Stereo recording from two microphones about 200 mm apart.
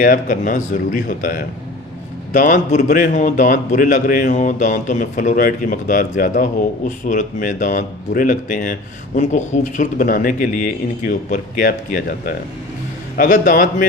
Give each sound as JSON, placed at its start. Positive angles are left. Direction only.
{"t": 0.0, "sound": "a man's voice", "side_deg": 45}